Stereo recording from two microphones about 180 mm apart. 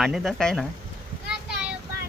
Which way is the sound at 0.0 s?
Centre (ahead or behind).